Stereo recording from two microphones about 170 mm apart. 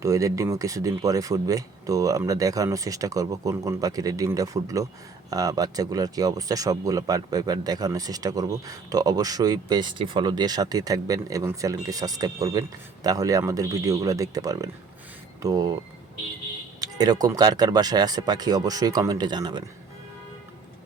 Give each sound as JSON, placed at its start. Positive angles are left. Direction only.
{"t": 0.0, "sound": "speech", "side_deg": -20}
{"t": 16.8, "sound": "speech", "side_deg": -20}